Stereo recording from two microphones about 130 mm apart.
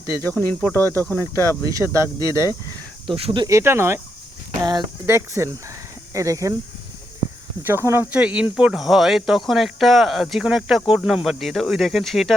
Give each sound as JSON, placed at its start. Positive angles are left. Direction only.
{"t": 0.2, "sound": "speech", "side_deg": 15}
{"t": 1.7, "sound": "speech", "side_deg": -25}
{"t": 3.1, "sound": "speech", "side_deg": -45}
{"t": 3.4, "sound": "speech", "side_deg": -20}
{"t": 4.6, "sound": "speech", "side_deg": -35}
{"t": 5.0, "sound": "speech", "side_deg": -20}
{"t": 7.6, "sound": "speech", "side_deg": -20}